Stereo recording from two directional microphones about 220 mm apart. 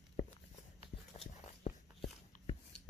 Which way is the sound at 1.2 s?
25° left (ahead or behind).